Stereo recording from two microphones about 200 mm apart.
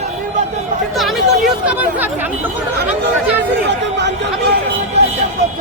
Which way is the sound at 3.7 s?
60° right (ahead or behind).